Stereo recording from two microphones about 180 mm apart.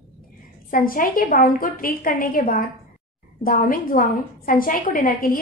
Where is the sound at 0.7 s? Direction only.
50° left (ahead or behind).